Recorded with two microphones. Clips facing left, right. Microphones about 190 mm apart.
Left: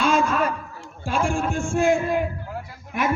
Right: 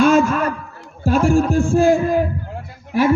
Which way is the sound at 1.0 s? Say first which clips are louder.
Right 8 dB; 40° right (ahead or behind).